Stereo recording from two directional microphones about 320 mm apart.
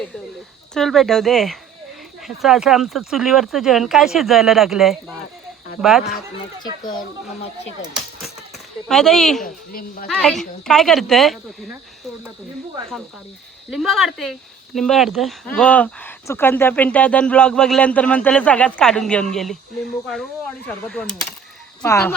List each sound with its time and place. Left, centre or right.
0.7 s speech: centre
8.9 s speech: centre
9.4 s a woman's voice: left
10.1 s speech: centre
13.7 s speech: centre